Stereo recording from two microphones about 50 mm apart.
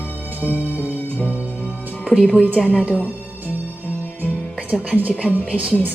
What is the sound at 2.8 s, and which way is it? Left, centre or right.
Speech, right.